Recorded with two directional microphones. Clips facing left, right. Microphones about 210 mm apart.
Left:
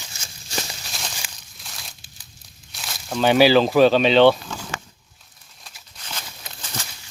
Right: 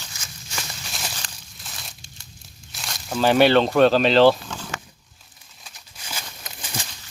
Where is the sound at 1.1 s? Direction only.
5° left (ahead or behind).